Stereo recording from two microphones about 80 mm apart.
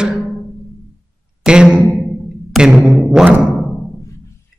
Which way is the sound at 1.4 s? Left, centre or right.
Centre.